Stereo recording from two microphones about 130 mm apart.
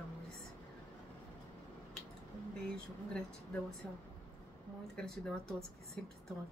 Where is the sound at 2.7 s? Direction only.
5° left (ahead or behind).